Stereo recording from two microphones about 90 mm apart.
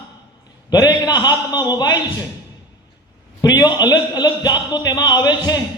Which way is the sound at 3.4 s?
45° left (ahead or behind).